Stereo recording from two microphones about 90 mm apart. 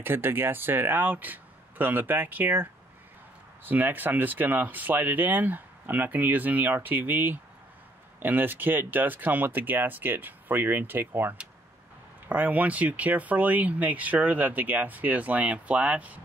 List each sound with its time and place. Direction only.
0.0 s speech: 25° right (ahead or behind)